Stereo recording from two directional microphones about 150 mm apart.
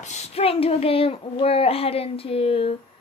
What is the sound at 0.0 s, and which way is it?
Speech, 50° left (ahead or behind).